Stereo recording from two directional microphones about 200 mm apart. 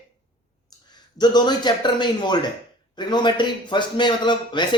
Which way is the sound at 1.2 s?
20° left (ahead or behind).